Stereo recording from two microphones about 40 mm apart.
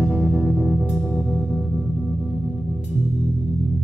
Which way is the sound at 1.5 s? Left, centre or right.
Centre.